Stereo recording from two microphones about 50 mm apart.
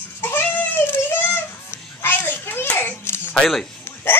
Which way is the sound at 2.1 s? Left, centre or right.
Left.